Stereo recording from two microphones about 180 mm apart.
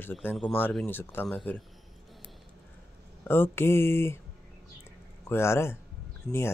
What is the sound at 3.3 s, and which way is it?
Speech, 10° left (ahead or behind).